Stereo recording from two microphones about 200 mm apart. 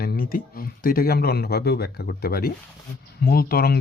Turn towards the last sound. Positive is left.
turn(degrees=50)  # may be behind; listen again after turning